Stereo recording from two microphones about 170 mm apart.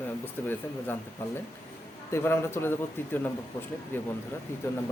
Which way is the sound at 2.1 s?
15° left (ahead or behind).